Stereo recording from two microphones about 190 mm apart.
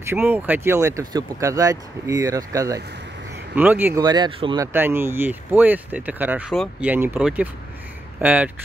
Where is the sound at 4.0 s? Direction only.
20° right (ahead or behind).